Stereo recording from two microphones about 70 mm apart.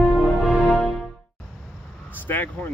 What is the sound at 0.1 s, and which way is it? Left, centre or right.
Music, centre.